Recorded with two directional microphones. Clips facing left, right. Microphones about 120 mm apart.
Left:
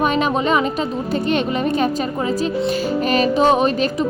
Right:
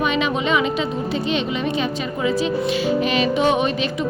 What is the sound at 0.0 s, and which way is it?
A woman's voice, 45° left (ahead or behind).